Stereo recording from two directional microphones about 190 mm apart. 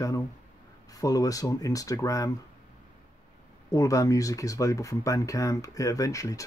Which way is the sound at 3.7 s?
15° left (ahead or behind).